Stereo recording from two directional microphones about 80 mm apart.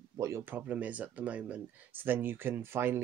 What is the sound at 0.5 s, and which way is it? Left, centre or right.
Speech, centre.